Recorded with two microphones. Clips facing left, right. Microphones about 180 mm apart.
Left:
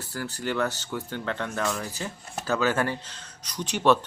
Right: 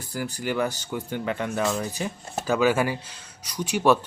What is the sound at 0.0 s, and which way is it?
Speech, 15° right (ahead or behind).